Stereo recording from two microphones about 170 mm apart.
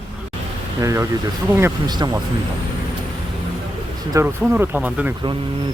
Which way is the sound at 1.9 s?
25° right (ahead or behind).